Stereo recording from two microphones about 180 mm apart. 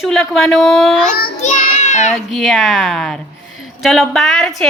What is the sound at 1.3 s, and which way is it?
Child singing, 40° left (ahead or behind).